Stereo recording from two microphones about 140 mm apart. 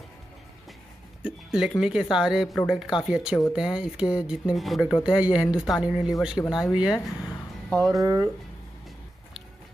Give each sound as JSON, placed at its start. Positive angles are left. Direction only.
{"t": 1.2, "sound": "speech", "side_deg": -5}
{"t": 8.0, "sound": "speech", "side_deg": -25}